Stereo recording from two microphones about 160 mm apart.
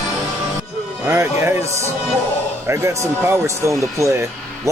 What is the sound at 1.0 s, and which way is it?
Speech, 15° right (ahead or behind).